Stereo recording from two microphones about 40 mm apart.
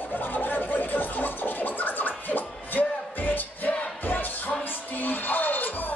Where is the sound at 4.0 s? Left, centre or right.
Left.